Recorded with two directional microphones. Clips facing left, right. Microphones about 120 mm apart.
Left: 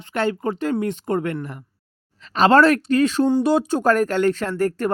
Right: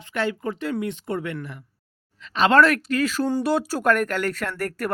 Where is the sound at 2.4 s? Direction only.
35° left (ahead or behind).